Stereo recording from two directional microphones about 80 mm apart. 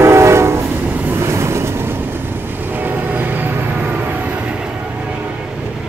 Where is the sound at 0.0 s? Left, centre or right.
Right.